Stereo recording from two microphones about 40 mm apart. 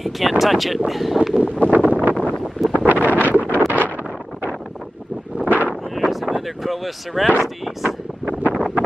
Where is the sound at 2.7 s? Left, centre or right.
Left.